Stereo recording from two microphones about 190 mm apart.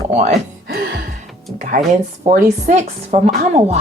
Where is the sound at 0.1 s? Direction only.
35° right (ahead or behind).